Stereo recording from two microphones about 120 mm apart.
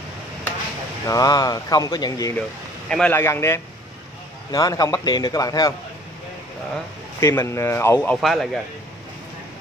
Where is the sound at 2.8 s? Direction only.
5° left (ahead or behind).